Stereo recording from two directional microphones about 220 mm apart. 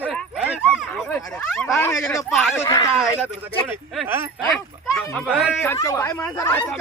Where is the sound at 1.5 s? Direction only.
Centre (ahead or behind).